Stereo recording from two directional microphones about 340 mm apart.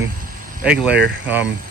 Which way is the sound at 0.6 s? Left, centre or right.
Centre.